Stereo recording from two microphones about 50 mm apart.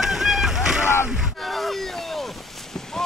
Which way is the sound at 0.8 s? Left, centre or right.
Left.